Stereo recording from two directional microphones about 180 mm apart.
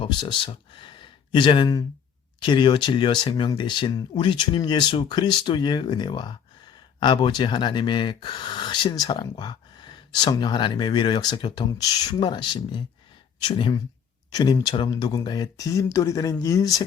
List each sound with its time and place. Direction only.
0.0 s speech: 25° left (ahead or behind)